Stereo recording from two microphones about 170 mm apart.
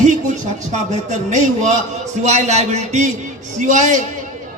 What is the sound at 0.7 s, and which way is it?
A man's voice, 45° right (ahead or behind).